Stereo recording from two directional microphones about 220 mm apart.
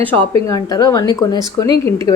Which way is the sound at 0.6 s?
20° left (ahead or behind).